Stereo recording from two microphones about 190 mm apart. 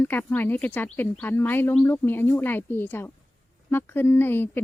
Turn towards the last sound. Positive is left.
turn(degrees=10)  # may be behind; listen again after turning